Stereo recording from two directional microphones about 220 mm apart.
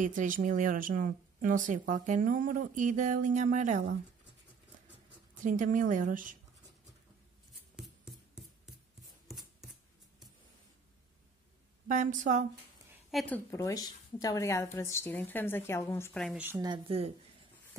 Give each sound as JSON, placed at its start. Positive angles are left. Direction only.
{"t": 0.0, "sound": "speech", "side_deg": -35}
{"t": 5.4, "sound": "speech", "side_deg": -35}
{"t": 7.7, "sound": "scissors", "side_deg": 0}
{"t": 11.9, "sound": "speech", "side_deg": -35}
{"t": 13.1, "sound": "a woman's voice", "side_deg": 5}